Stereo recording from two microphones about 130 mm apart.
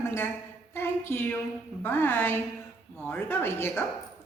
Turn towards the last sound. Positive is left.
turn(degrees=20)  # may be behind; listen again after turning